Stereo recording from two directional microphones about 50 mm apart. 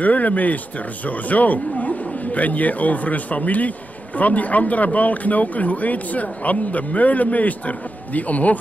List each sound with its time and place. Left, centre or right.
0.0 s speech: left